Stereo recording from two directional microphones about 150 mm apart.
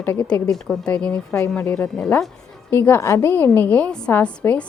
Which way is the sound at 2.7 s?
15° left (ahead or behind).